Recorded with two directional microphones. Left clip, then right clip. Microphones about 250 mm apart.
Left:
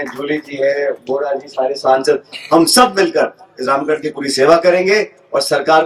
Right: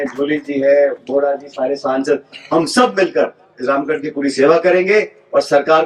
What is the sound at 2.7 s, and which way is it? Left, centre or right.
Speech, left.